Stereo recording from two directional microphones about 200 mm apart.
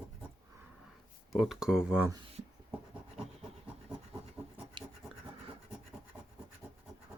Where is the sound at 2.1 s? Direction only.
30° right (ahead or behind).